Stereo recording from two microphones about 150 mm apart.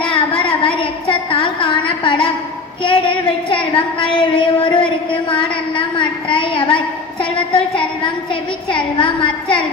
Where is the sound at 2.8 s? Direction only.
35° left (ahead or behind).